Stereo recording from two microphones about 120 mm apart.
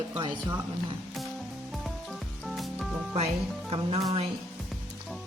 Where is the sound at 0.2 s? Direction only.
40° right (ahead or behind).